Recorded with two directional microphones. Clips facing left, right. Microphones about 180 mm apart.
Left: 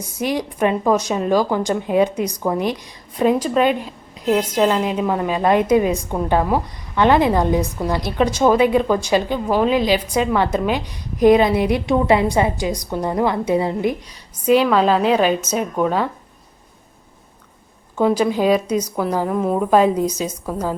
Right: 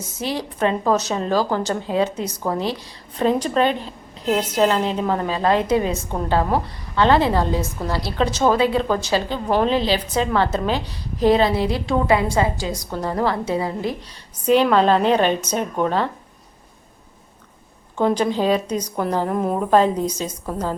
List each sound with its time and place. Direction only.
0.2 s a woman's voice: 15° left (ahead or behind)
14.4 s a woman's voice: 10° left (ahead or behind)
17.9 s a woman's voice: 10° left (ahead or behind)
19.7 s a woman's voice: 10° left (ahead or behind)